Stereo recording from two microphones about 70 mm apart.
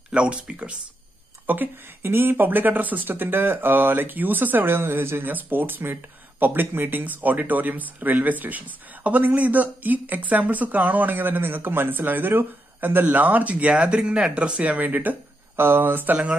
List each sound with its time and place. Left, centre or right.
0.1 s speech: centre
1.5 s speech: right